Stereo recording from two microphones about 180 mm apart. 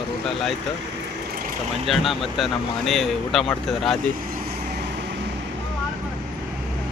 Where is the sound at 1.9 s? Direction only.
Centre (ahead or behind).